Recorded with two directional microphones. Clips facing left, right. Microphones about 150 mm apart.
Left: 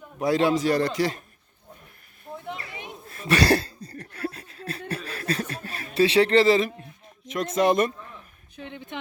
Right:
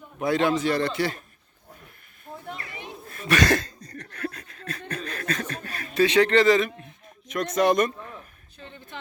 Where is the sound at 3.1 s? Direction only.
30° left (ahead or behind).